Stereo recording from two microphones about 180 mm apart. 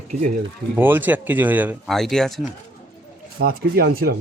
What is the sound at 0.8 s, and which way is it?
Speech, 10° right (ahead or behind).